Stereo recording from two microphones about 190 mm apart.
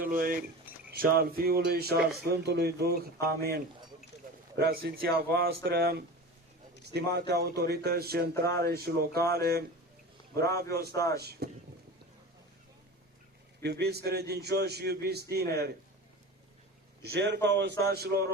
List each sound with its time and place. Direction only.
0.0 s a man's voice: 50° right (ahead or behind)
10.9 s speech: 15° left (ahead or behind)
11.2 s a man's voice: 55° right (ahead or behind)
13.6 s a man's voice: 60° right (ahead or behind)
17.1 s a man's voice: 65° right (ahead or behind)